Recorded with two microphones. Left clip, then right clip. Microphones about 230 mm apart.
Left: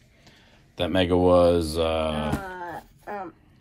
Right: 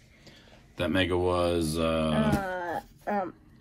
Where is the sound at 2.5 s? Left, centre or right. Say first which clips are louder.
Right 3 dB; right.